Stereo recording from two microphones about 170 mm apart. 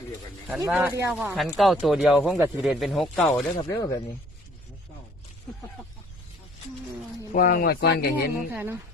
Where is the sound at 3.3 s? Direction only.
15° left (ahead or behind).